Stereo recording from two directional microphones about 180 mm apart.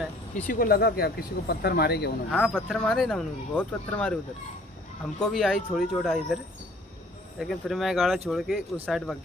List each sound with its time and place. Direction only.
0.5 s speech: 55° left (ahead or behind)
2.3 s speech: centre (ahead or behind)